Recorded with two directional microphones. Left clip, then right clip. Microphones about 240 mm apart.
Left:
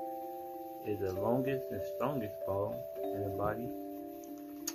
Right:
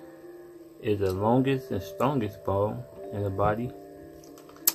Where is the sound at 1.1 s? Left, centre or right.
Centre.